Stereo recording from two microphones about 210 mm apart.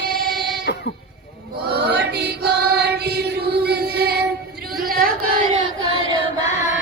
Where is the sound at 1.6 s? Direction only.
50° right (ahead or behind).